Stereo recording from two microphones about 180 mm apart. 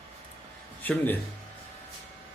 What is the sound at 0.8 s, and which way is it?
Speech, 10° left (ahead or behind).